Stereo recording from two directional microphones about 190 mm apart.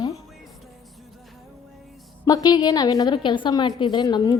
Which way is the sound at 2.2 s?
20° left (ahead or behind).